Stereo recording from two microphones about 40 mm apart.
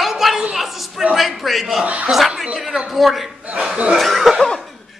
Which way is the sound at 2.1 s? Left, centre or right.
Centre.